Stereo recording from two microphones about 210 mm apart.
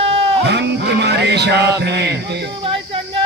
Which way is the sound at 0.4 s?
55° right (ahead or behind).